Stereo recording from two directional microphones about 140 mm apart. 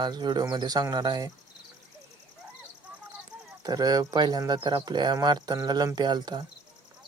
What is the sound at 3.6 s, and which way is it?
Speech, 30° right (ahead or behind).